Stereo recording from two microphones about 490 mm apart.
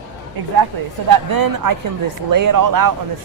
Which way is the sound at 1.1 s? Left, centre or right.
Right.